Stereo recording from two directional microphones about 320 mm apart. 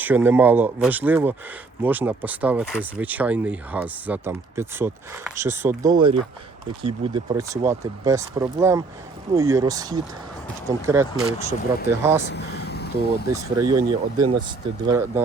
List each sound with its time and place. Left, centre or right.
0.0 s speech: centre
12.3 s speech: left
13.3 s speech: centre